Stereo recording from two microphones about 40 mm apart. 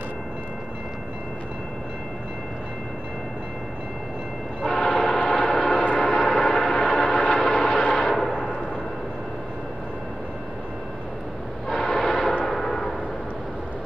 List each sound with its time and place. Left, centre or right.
4.6 s train: left
5.2 s gong: left
6.1 s gong: centre
6.9 s train: left
7.3 s vehicle: centre
8.1 s a sound: centre
11.7 s train: centre
12.4 s a sound: centre